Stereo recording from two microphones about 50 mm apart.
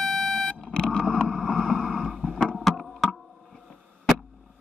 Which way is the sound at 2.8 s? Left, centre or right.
Centre.